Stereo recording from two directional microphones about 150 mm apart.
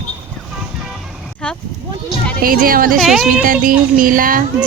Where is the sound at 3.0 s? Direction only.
5° right (ahead or behind).